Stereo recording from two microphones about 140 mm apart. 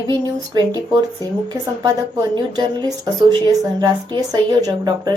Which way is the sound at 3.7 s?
25° right (ahead or behind).